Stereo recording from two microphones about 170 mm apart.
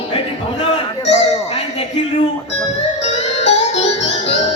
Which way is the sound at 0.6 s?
40° left (ahead or behind).